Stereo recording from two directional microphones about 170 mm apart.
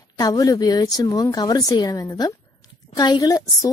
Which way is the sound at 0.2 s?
20° left (ahead or behind).